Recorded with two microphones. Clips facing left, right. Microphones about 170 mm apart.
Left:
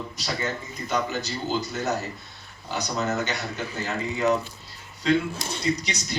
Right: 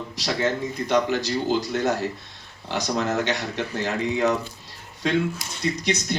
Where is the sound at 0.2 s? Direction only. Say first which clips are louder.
Right 7 dB; 90° right.